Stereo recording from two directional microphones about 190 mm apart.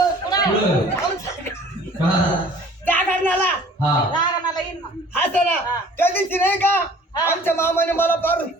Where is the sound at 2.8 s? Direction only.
10° left (ahead or behind).